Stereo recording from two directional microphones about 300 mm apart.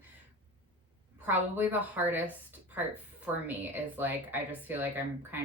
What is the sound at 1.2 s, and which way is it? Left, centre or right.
Speech, centre.